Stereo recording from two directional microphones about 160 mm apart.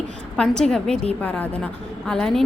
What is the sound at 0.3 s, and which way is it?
A woman's voice, 5° left (ahead or behind).